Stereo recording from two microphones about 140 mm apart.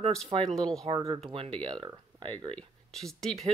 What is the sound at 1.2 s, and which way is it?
Speech, 40° right (ahead or behind).